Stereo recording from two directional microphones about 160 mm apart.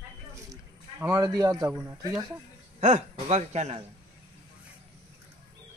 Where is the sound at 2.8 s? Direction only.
45° right (ahead or behind).